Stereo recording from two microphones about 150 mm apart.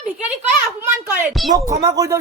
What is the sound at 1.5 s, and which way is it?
Speech, 25° right (ahead or behind).